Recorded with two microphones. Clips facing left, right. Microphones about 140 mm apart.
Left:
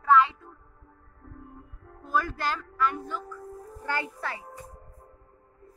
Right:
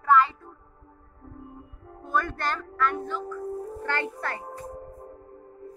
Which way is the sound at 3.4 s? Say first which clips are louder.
Right 9 dB; 30° right (ahead or behind).